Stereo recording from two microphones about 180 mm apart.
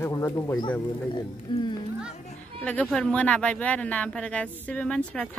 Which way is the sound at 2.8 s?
5° left (ahead or behind).